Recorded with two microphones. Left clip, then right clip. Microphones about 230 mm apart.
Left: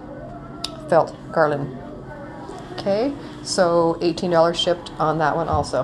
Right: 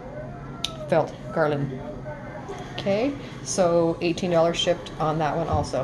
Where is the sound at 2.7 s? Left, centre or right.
Centre.